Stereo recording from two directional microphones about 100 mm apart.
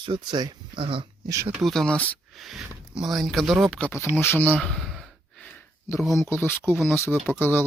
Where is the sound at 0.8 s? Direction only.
60° right (ahead or behind).